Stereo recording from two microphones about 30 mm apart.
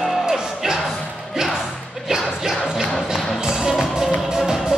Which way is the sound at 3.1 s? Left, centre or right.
Centre.